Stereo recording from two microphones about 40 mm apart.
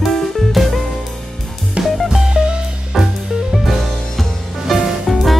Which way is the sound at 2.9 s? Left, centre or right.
Centre.